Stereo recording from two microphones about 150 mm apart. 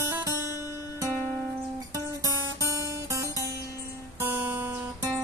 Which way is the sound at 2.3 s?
20° right (ahead or behind).